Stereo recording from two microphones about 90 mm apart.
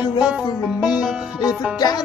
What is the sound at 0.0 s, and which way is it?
Music, 55° left (ahead or behind).